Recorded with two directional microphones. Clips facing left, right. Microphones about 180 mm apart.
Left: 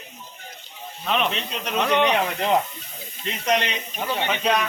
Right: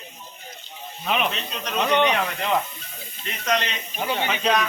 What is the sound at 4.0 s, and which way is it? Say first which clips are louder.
Speech: even; 5° right (ahead or behind).